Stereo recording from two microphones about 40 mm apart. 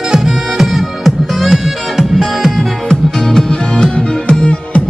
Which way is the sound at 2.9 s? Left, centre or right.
Centre.